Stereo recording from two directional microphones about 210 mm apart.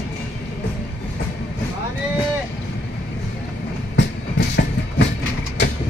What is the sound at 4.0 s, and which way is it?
Train, 55° left (ahead or behind).